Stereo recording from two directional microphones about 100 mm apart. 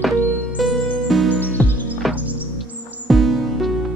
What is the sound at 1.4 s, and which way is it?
Music, 20° left (ahead or behind).